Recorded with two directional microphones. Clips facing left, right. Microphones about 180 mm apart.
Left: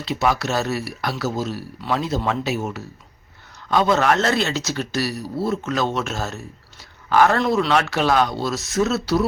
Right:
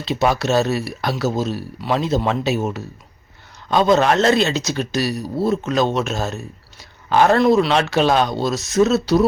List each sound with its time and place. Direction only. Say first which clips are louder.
0.0 s speech: right 3 dB; 25° right (ahead or behind)